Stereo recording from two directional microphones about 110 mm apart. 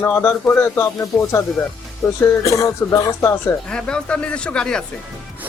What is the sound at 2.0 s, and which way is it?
Speech, 30° left (ahead or behind).